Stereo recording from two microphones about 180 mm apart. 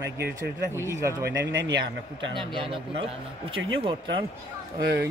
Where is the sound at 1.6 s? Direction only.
90° right.